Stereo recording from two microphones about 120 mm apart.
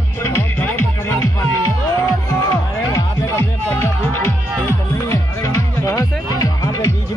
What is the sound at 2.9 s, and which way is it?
Music, 25° left (ahead or behind).